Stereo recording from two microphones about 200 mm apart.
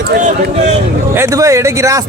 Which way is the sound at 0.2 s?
40° right (ahead or behind).